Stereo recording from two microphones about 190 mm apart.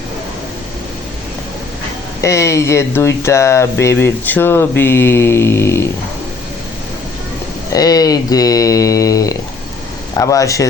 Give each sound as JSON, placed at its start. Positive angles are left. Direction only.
{"t": 2.2, "sound": "speech", "side_deg": 15}
{"t": 7.7, "sound": "speech", "side_deg": 20}